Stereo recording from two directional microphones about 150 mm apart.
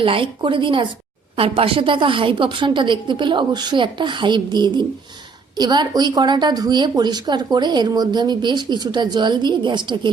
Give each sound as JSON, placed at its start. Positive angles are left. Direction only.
{"t": 0.0, "sound": "a woman's voice", "side_deg": -35}